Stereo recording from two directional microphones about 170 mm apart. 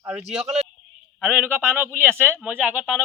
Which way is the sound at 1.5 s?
15° right (ahead or behind).